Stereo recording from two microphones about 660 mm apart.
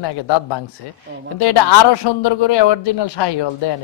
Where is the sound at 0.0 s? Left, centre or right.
Left.